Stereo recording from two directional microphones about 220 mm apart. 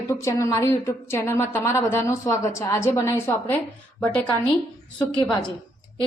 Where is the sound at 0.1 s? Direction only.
15° left (ahead or behind).